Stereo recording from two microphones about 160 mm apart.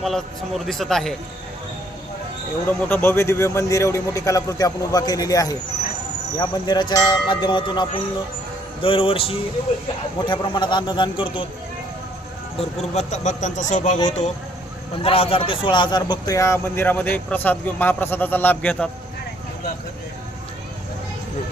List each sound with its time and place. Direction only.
0.0 s a man's voice: centre (ahead or behind)
2.6 s a man's voice: 15° left (ahead or behind); by 7.9 s 30° left (ahead or behind)
8.8 s music: 35° left (ahead or behind)
10.2 s a man's voice: 30° left (ahead or behind)
12.5 s speech: 45° left (ahead or behind)
15.0 s a man's voice: 35° left (ahead or behind); by 18.9 s 10° left (ahead or behind)